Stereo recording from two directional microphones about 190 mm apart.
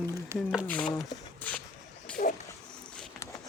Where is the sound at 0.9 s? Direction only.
10° left (ahead or behind).